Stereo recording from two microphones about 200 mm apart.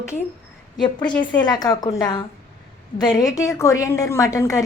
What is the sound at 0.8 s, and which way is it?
A woman's voice, 20° left (ahead or behind).